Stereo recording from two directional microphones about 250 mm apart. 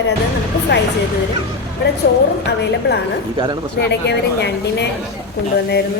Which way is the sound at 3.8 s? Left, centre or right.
Left.